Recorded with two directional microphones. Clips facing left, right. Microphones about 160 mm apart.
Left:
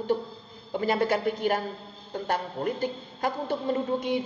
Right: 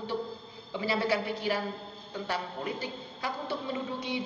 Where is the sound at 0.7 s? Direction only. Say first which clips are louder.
Left 4 dB; 50° left (ahead or behind).